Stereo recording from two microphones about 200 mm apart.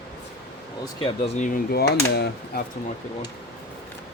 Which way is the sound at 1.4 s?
45° left (ahead or behind).